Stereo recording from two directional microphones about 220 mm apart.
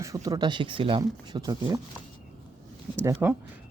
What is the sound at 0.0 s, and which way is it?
Speech, 15° right (ahead or behind).